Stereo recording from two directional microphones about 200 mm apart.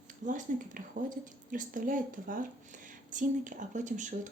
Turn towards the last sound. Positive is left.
turn(degrees=-40)  # may be behind; listen again after turning